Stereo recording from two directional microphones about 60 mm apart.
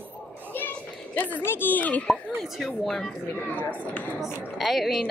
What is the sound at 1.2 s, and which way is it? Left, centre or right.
Speech, left.